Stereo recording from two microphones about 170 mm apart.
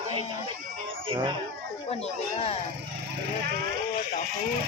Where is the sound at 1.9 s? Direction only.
35° left (ahead or behind).